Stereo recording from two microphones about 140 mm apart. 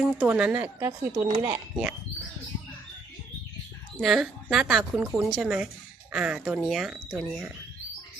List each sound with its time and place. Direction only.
0.0 s a woman's voice: 10° right (ahead or behind)
4.0 s a woman's voice: centre (ahead or behind)